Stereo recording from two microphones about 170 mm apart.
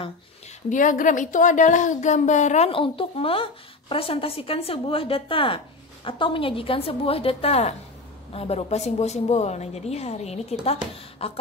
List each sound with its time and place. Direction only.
0.7 s speech: 50° left (ahead or behind); by 11.4 s 35° left (ahead or behind)